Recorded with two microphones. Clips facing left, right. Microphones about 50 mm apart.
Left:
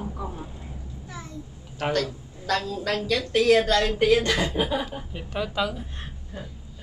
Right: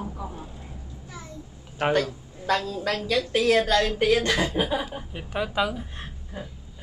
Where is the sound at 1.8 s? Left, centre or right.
Centre.